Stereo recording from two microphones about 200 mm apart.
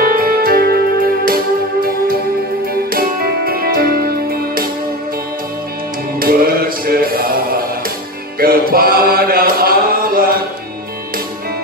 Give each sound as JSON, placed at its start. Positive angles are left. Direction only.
{"t": 0.0, "sound": "music", "side_deg": -45}
{"t": 6.1, "sound": "music", "side_deg": -45}